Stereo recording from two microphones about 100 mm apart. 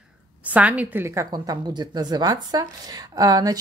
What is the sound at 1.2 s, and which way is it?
Speech, 45° right (ahead or behind).